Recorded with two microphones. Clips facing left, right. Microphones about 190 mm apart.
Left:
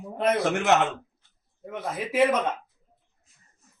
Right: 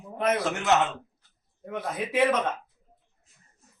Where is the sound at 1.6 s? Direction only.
5° left (ahead or behind).